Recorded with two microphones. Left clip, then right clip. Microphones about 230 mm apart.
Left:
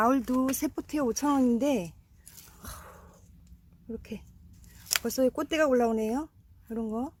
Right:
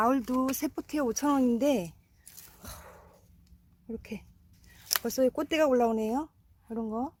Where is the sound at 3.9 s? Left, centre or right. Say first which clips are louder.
Even; centre.